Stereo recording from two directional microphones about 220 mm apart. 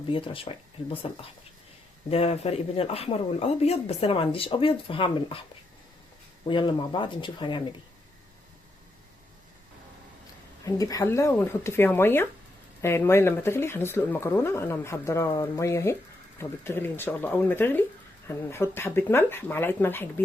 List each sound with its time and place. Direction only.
0.1 s speech: 25° left (ahead or behind)
6.4 s speech: 20° left (ahead or behind)
10.7 s speech: 15° left (ahead or behind)